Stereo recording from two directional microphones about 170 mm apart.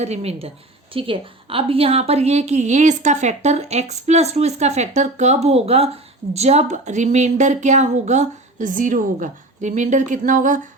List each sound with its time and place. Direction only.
0.0 s a woman's voice: 40° right (ahead or behind)